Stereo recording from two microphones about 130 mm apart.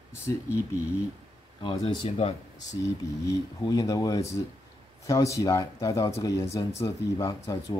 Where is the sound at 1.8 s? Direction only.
45° left (ahead or behind).